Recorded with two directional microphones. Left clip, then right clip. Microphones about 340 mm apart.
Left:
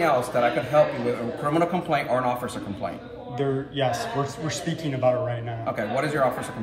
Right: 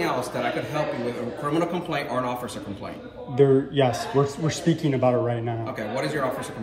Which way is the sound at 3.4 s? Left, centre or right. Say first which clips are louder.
Right 7 dB; centre.